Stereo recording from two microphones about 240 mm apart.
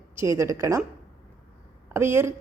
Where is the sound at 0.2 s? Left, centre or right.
Centre.